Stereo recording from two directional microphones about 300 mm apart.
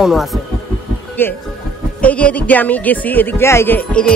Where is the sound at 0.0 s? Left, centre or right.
Centre.